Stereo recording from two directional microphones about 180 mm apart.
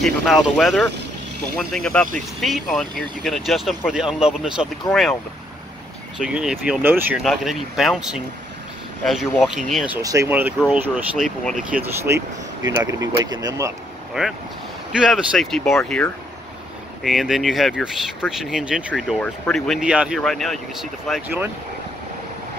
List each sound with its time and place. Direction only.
0.0 s speech: centre (ahead or behind)
6.1 s speech: 5° right (ahead or behind)
7.2 s speech: centre (ahead or behind)
10.0 s speech: 15° right (ahead or behind)
11.8 s speech: 15° right (ahead or behind)
14.9 s speech: 5° right (ahead or behind)